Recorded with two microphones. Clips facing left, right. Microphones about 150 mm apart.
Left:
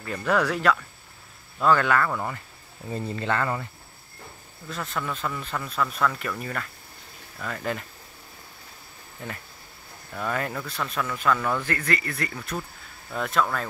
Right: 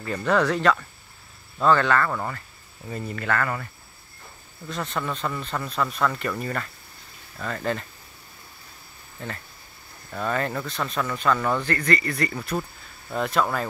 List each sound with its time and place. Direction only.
0.0 s speech: centre (ahead or behind)
3.1 s speech: 25° left (ahead or behind)
4.6 s speech: 5° left (ahead or behind)
9.2 s speech: 10° left (ahead or behind)